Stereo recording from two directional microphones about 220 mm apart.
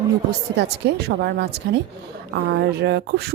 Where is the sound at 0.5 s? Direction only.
50° right (ahead or behind).